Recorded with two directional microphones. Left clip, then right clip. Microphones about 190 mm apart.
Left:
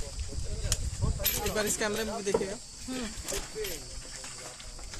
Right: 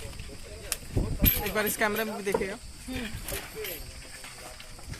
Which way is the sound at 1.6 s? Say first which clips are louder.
Right 5 dB; 35° right (ahead or behind).